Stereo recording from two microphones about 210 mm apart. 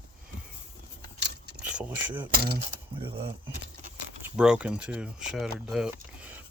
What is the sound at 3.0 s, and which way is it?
Speech, 25° right (ahead or behind).